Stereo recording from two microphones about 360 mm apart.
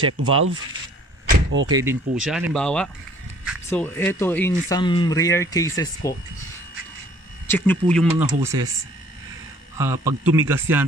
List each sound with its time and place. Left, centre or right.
0.2 s speech: right
1.3 s vehicle: right
1.7 s a man's voice: centre
7.4 s speech: centre
9.8 s a man's voice: centre